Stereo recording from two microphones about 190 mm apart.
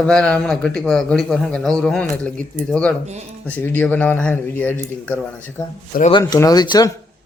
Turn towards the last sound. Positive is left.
turn(degrees=20)  # may be behind; listen again after turning